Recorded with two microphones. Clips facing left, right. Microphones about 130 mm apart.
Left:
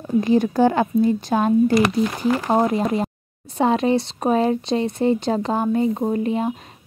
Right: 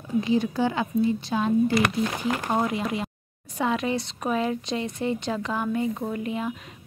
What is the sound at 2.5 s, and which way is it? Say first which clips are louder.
Speech: left 7 dB; 35° left (ahead or behind).